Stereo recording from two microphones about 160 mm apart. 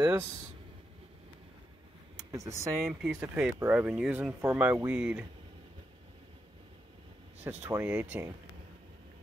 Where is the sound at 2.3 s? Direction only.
20° right (ahead or behind).